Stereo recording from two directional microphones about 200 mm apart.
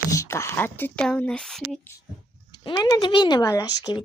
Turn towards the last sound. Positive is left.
turn(degrees=20)  # may be behind; listen again after turning